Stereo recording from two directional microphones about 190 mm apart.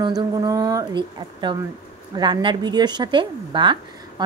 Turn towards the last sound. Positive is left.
turn(degrees=-25)  # may be behind; listen again after turning